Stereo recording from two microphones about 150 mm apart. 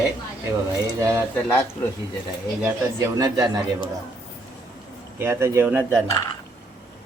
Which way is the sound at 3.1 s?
25° right (ahead or behind).